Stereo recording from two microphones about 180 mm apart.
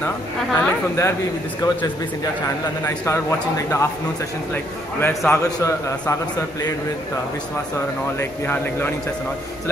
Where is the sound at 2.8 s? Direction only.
15° left (ahead or behind).